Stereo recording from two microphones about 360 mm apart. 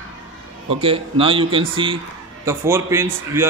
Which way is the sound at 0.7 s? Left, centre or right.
Centre.